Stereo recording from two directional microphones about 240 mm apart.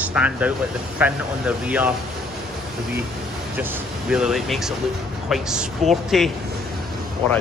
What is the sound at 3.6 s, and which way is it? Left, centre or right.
Speech, centre.